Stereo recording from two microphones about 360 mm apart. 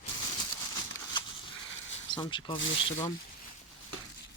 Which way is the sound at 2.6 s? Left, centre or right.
Left.